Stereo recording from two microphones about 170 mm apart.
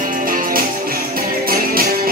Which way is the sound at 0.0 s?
55° right (ahead or behind).